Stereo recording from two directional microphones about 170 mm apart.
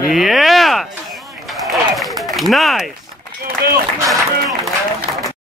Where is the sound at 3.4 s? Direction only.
70° right (ahead or behind).